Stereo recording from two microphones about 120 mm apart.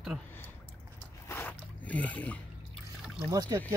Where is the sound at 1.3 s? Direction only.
15° left (ahead or behind).